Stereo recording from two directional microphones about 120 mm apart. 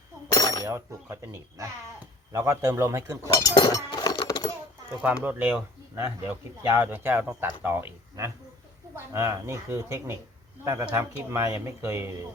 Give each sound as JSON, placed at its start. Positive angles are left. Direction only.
{"t": 0.3, "sound": "cutlery", "side_deg": 30}
{"t": 0.6, "sound": "speech", "side_deg": -25}
{"t": 3.3, "sound": "chink", "side_deg": 35}
{"t": 5.0, "sound": "speech", "side_deg": -15}